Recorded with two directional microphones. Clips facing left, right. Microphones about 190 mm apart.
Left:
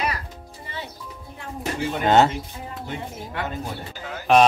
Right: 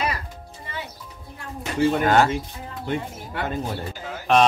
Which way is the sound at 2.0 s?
25° left (ahead or behind).